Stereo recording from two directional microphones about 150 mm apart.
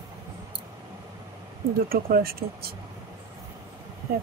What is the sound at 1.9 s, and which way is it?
Speech, 85° right.